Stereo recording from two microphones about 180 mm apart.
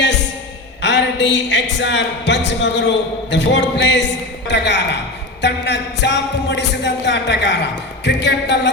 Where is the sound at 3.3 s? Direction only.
80° left.